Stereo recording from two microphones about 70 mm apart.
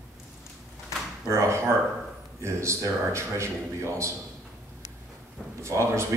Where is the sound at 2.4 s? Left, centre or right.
Right.